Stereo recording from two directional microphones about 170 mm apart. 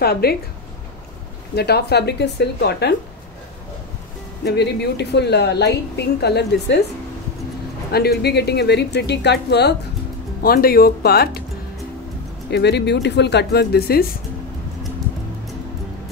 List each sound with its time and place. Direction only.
0.0 s a woman's voice: 65° left (ahead or behind)
1.5 s a woman's voice: 70° left (ahead or behind)
4.5 s a woman's voice: 80° left
7.9 s a woman's voice: 70° left (ahead or behind)
10.4 s speech: 60° left (ahead or behind)
12.4 s speech: 80° left